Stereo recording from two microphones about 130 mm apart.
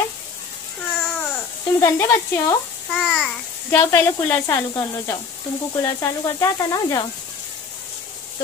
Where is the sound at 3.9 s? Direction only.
15° left (ahead or behind).